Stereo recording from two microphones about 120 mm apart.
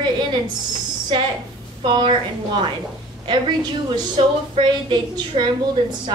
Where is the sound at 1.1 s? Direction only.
40° right (ahead or behind).